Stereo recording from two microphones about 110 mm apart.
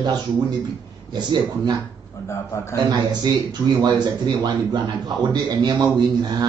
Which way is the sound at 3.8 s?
40° right (ahead or behind).